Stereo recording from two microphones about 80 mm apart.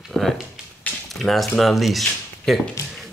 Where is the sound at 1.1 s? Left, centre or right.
Centre.